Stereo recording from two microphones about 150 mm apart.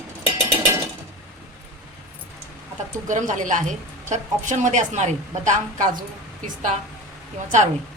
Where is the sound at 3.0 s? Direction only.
55° right (ahead or behind).